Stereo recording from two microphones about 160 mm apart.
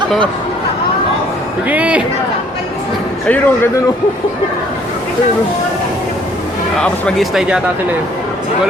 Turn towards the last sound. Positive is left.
turn(degrees=-5)  # may be behind; listen again after turning